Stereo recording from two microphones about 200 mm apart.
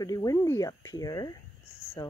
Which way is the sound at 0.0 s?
15° left (ahead or behind).